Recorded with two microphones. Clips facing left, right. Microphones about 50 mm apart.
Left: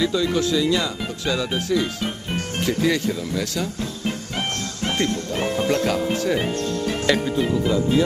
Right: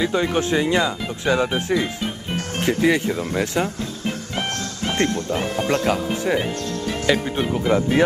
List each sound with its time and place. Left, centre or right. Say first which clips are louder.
0.0 s speech: even; right
5.0 s speech: right 2 dB; right
5.3 s speech: even; right
7.3 s speech: right 1 dB; right